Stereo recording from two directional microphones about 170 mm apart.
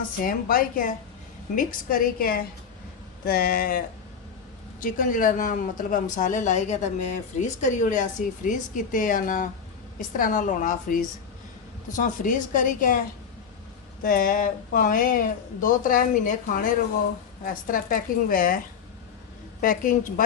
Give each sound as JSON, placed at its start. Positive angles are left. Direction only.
{"t": 0.2, "sound": "a woman's voice", "side_deg": 55}
{"t": 14.0, "sound": "a woman's voice", "side_deg": 55}
{"t": 19.6, "sound": "speech", "side_deg": 55}